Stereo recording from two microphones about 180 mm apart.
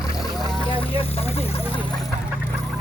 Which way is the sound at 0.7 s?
30° left (ahead or behind).